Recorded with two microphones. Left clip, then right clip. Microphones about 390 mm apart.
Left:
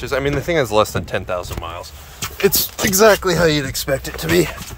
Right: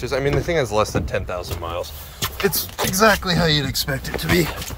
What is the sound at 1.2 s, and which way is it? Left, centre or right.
Speech, centre.